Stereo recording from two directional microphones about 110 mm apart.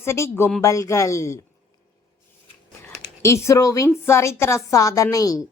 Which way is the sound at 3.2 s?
25° left (ahead or behind).